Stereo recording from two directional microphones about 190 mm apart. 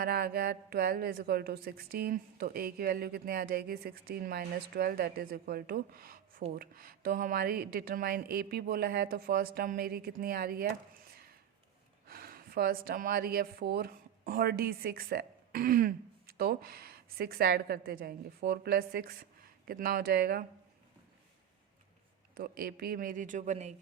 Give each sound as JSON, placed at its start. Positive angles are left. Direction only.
{"t": 0.0, "sound": "a woman's voice", "side_deg": -55}
{"t": 12.0, "sound": "a woman's voice", "side_deg": -50}
{"t": 22.4, "sound": "a woman's voice", "side_deg": -55}